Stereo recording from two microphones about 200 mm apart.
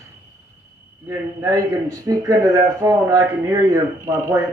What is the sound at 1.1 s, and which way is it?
Speech, 15° right (ahead or behind).